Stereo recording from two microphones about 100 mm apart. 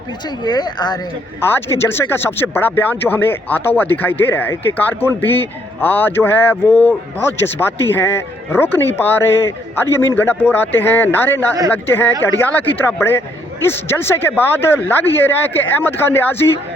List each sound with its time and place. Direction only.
0.4 s speech: 45° left (ahead or behind)
1.8 s speech: 25° left (ahead or behind)